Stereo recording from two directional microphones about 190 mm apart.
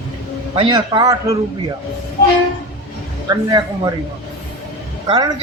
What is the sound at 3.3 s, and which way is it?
Speech, 20° right (ahead or behind).